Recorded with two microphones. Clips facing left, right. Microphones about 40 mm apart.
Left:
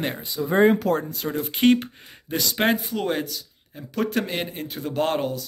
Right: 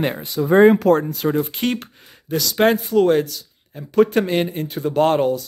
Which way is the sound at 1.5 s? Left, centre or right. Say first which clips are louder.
Left 4 dB; centre.